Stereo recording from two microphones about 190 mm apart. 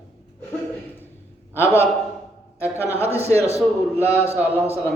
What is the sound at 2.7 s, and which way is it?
Speech, 10° left (ahead or behind).